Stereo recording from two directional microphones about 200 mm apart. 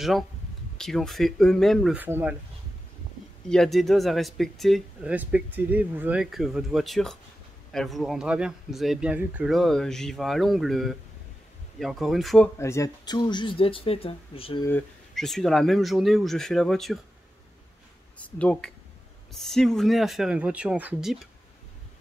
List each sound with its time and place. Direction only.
0.7 s speech: centre (ahead or behind)
2.0 s speech: 10° right (ahead or behind)
3.4 s speech: centre (ahead or behind)
12.5 s speech: 15° left (ahead or behind)
14.6 s speech: 10° left (ahead or behind)
18.2 s speech: 5° left (ahead or behind)